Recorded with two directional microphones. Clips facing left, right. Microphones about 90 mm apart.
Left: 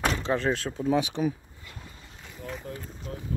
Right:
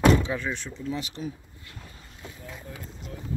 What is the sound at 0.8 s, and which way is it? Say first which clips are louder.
Speech: left 9 dB; 80° left.